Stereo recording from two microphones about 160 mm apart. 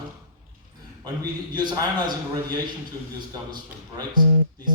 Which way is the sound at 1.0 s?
25° right (ahead or behind).